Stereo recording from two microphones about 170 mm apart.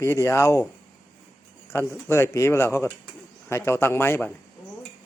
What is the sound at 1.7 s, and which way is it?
Speech, 15° left (ahead or behind).